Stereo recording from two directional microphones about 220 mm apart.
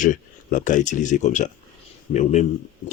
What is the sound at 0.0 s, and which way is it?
Speech, 35° left (ahead or behind).